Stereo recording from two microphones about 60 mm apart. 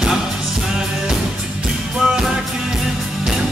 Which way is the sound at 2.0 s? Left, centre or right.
Centre.